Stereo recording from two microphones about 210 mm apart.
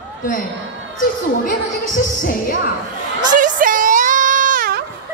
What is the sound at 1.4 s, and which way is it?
Music, 40° left (ahead or behind).